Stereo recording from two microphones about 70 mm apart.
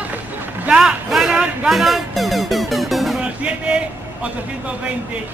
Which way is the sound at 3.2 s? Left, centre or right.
Centre.